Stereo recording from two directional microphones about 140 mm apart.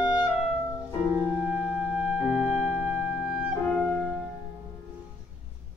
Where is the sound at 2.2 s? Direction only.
Centre (ahead or behind).